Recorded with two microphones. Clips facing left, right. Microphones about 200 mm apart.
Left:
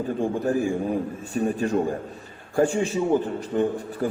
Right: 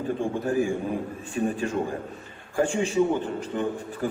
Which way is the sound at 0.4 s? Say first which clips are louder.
Left 1 dB; 40° left (ahead or behind).